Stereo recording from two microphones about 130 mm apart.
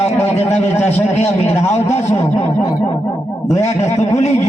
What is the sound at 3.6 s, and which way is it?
Speech, 60° left (ahead or behind).